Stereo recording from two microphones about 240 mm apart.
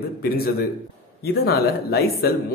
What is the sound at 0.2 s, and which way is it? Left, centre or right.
Speech, left.